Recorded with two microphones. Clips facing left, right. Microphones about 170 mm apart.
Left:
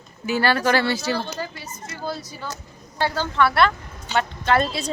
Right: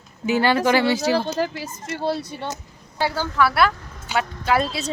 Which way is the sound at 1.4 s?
90° right.